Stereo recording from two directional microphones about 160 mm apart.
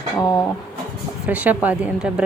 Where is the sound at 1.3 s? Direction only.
10° right (ahead or behind).